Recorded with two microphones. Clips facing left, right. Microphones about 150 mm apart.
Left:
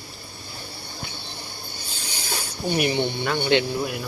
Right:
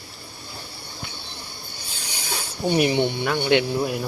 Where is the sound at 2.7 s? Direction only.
20° right (ahead or behind).